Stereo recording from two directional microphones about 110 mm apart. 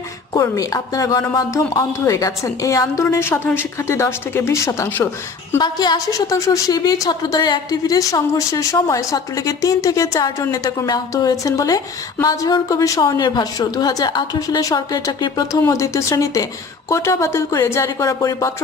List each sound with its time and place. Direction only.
0.3 s a woman's voice: 30° left (ahead or behind)
5.5 s a woman's voice: 40° left (ahead or behind)